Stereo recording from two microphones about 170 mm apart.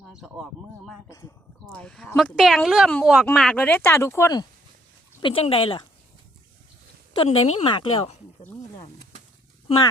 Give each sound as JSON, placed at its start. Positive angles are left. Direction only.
{"t": 1.0, "sound": "speech", "side_deg": 20}
{"t": 5.2, "sound": "speech", "side_deg": 35}
{"t": 7.3, "sound": "speech", "side_deg": 40}